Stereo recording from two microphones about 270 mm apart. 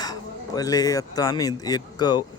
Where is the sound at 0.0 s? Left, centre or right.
Centre.